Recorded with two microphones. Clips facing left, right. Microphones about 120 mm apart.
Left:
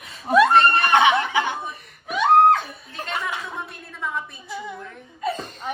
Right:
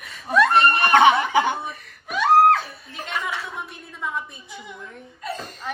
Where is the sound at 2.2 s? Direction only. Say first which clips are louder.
Even; centre (ahead or behind).